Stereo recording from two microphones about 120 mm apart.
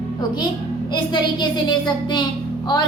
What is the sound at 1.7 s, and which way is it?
Speech, 40° left (ahead or behind).